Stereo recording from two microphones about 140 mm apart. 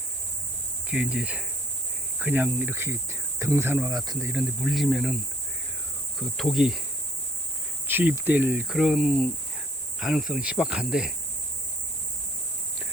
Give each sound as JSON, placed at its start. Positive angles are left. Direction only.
{"t": 0.9, "sound": "speech", "side_deg": -10}
{"t": 4.3, "sound": "cricket", "side_deg": -5}
{"t": 7.9, "sound": "speech", "side_deg": -15}
{"t": 10.0, "sound": "cricket", "side_deg": -5}